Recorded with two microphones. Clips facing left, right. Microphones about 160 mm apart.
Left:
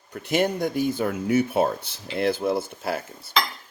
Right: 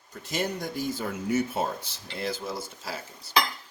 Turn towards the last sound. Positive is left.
turn(degrees=55)  # may be behind; listen again after turning